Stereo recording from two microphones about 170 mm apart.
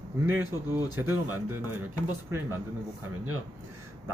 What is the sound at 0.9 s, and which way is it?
Speech, 15° right (ahead or behind).